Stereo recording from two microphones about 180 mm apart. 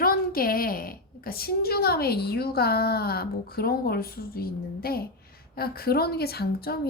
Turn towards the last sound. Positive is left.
turn(degrees=60)  # may be behind; listen again after turning